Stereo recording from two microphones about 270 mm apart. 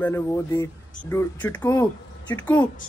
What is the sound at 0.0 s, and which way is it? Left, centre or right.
A woman's voice, centre.